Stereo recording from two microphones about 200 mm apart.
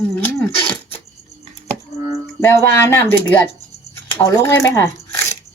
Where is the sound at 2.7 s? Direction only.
15° left (ahead or behind).